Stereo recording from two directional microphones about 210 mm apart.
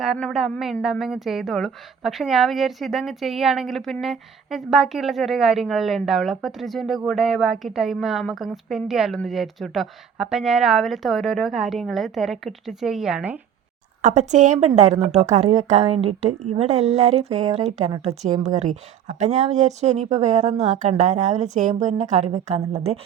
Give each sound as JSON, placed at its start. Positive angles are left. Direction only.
{"t": 0.0, "sound": "a woman's voice", "side_deg": 0}
{"t": 14.0, "sound": "a woman's voice", "side_deg": -35}